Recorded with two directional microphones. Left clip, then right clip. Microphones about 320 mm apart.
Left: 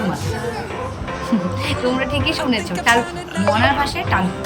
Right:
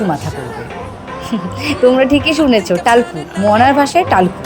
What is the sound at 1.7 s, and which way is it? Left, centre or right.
Speech, centre.